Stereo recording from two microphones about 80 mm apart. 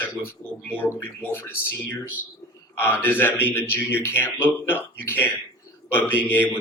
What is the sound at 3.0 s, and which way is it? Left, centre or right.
A man's voice, left.